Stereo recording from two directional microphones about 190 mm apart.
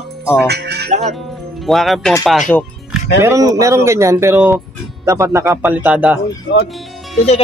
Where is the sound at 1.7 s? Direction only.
Centre (ahead or behind).